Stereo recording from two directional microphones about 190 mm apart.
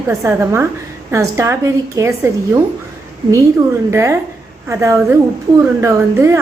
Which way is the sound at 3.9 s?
15° right (ahead or behind).